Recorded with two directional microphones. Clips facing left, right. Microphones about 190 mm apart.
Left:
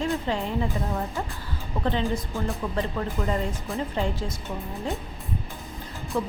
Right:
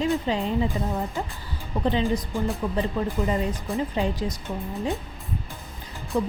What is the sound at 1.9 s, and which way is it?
Speech, 15° right (ahead or behind).